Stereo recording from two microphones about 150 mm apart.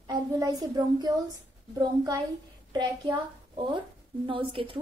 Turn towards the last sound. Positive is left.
turn(degrees=-35)  # may be behind; listen again after turning